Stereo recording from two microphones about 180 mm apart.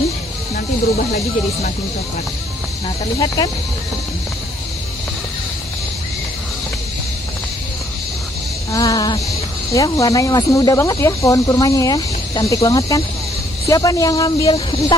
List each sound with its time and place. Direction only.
8.7 s speech: 20° left (ahead or behind)